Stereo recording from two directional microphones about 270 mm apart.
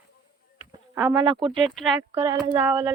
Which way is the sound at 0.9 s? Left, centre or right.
Centre.